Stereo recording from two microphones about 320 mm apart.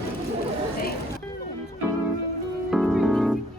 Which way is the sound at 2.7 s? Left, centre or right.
Centre.